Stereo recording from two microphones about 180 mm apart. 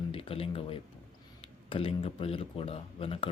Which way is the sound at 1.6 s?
30° left (ahead or behind).